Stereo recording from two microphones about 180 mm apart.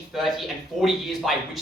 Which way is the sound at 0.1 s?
Centre (ahead or behind).